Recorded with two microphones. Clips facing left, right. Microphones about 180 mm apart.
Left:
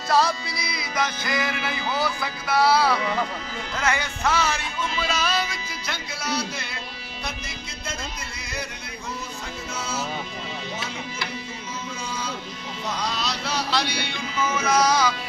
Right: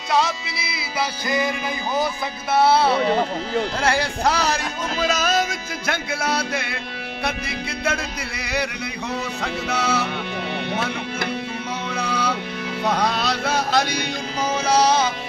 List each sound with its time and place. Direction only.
0.1 s music: centre (ahead or behind)
2.0 s speech: 20° right (ahead or behind); by 6.8 s 60° right (ahead or behind)
7.2 s music: 60° right (ahead or behind)
9.4 s music: 70° right (ahead or behind)
11.9 s a sound: 65° right (ahead or behind)
12.8 s music: 60° right (ahead or behind); by 15.1 s 25° right (ahead or behind)